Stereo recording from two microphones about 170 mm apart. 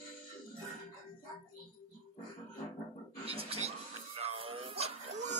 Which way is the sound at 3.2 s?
35° right (ahead or behind).